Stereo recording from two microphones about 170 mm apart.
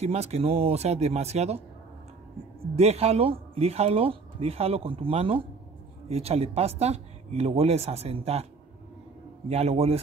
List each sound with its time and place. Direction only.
0.0 s speech: 40° right (ahead or behind)
2.7 s speech: 35° right (ahead or behind)
9.5 s speech: 40° right (ahead or behind)